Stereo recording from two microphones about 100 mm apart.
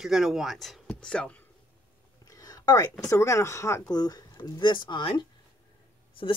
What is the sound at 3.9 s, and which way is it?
Speech, 40° left (ahead or behind).